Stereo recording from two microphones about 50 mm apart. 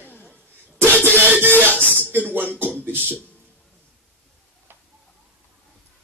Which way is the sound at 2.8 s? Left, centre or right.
Right.